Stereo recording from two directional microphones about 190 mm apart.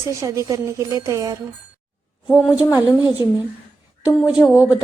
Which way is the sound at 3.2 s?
15° right (ahead or behind).